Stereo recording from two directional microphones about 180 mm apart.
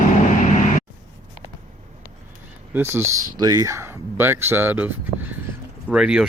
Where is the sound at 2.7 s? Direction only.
15° right (ahead or behind).